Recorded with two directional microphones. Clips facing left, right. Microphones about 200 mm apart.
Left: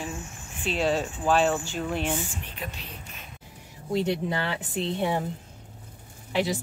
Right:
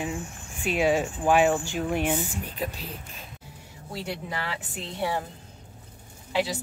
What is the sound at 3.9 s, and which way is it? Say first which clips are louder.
Speech: left 8 dB; 25° left (ahead or behind).